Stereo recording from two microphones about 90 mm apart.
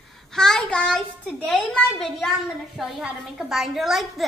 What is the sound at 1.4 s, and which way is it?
A woman's voice, 5° left (ahead or behind).